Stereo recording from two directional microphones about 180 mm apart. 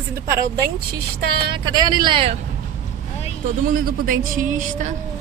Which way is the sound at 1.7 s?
25° right (ahead or behind).